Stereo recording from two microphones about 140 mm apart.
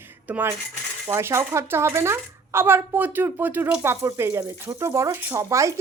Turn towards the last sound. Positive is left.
turn(degrees=-20)  # may be behind; listen again after turning